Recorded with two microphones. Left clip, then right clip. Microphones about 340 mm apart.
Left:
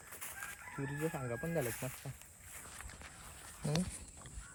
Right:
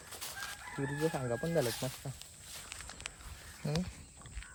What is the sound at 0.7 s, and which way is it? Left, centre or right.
Speech, right.